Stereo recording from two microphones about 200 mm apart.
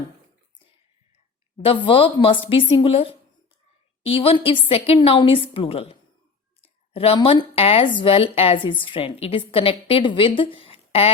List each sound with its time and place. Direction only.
1.6 s speech: 25° left (ahead or behind)